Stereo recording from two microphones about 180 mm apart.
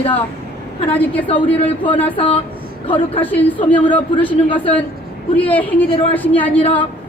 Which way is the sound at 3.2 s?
10° left (ahead or behind).